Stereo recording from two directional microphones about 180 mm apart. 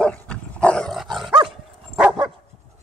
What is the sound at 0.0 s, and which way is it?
Dog, 5° left (ahead or behind).